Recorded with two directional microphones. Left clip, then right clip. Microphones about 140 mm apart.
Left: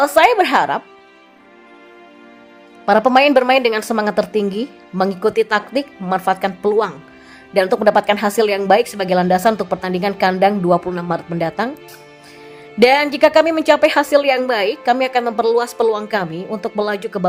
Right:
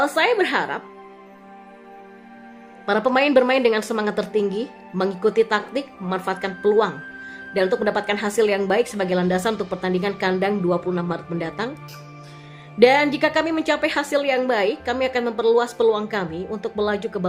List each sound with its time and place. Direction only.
0.0 s a woman's voice: 35° left (ahead or behind)
2.8 s a woman's voice: 35° left (ahead or behind)
12.8 s a woman's voice: 35° left (ahead or behind)